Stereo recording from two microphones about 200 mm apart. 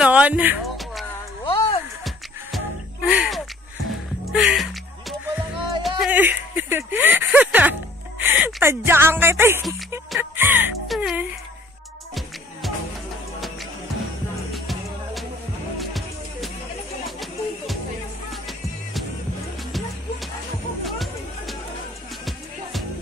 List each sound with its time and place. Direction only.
0.0 s a sound: 5° right (ahead or behind)
1.4 s music: 25° left (ahead or behind)
3.1 s speech: centre (ahead or behind)
5.3 s music: centre (ahead or behind)
8.2 s speech: 10° right (ahead or behind)
10.1 s music: 10° right (ahead or behind)
14.5 s music: centre (ahead or behind)
17.0 s a sound: centre (ahead or behind)
20.8 s music: centre (ahead or behind)